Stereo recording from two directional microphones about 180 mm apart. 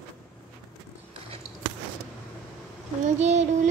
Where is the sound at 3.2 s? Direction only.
40° right (ahead or behind).